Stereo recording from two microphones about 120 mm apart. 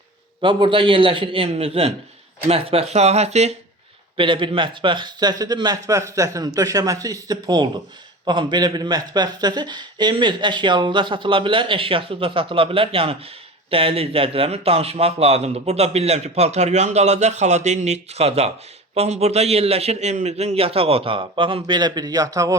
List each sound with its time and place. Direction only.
0.4 s a man's voice: 45° right (ahead or behind); by 3.5 s 65° right (ahead or behind)
4.2 s a man's voice: 45° right (ahead or behind)